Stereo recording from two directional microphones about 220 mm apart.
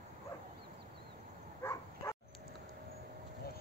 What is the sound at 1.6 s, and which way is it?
Bow-wow, 15° left (ahead or behind).